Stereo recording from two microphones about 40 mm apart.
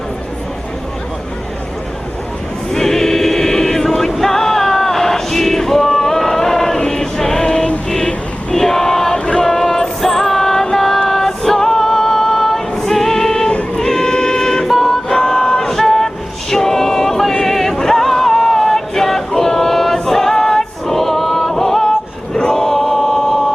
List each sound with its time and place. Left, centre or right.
2.7 s choir: centre
7.9 s vehicle: centre
8.5 s a sound: centre
9.1 s chant: left
9.4 s music: centre
13.7 s a sound: centre
22.4 s chant: centre